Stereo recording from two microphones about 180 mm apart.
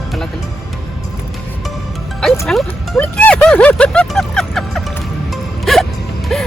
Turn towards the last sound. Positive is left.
turn(degrees=5)  # may be behind; listen again after turning